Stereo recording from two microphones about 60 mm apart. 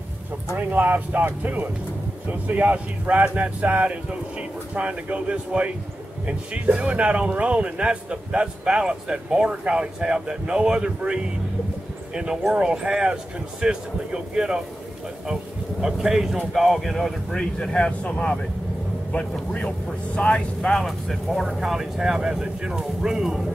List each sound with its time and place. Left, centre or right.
0.6 s speech: right; by 14.6 s centre
15.8 s speech: centre
17.4 s speech: centre
20.2 s speech: centre
20.8 s speech: centre